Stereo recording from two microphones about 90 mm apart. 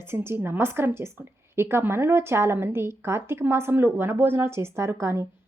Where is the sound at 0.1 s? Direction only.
25° right (ahead or behind).